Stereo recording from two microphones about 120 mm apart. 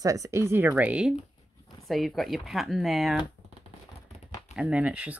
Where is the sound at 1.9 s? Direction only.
Centre (ahead or behind).